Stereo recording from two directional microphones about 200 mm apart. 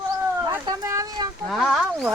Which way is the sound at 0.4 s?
15° right (ahead or behind).